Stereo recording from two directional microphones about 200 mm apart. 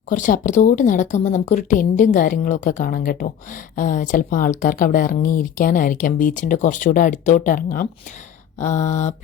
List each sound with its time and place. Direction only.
0.1 s speech: 40° left (ahead or behind)